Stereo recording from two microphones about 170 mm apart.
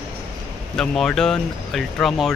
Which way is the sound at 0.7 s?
5° left (ahead or behind).